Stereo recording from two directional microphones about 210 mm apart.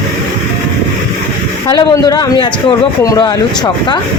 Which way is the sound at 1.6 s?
20° left (ahead or behind).